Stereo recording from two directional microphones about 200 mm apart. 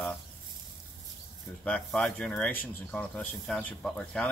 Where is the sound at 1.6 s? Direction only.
5° left (ahead or behind).